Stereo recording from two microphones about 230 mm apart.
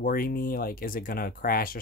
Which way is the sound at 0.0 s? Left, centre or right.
Left.